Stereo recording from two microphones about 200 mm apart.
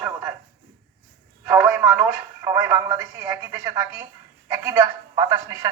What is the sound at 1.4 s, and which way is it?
A woman's voice, 10° right (ahead or behind).